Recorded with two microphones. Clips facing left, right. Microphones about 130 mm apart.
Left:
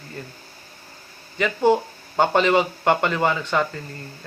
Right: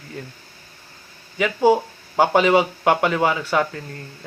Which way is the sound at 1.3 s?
10° right (ahead or behind).